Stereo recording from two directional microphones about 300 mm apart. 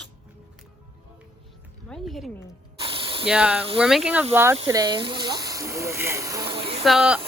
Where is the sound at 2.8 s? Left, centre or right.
Centre.